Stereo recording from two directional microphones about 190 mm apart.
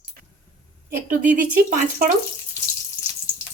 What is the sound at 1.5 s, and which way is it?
Speech, 50° right (ahead or behind).